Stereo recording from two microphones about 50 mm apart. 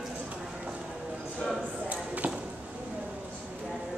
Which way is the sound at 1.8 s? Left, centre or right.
Right.